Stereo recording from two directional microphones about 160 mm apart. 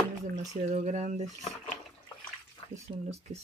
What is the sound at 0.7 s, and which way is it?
Speech, 45° right (ahead or behind).